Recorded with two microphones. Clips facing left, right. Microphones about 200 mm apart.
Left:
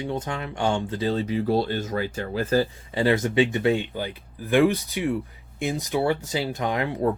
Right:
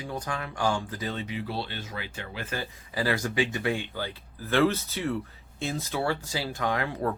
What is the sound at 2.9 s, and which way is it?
Speech, 25° left (ahead or behind).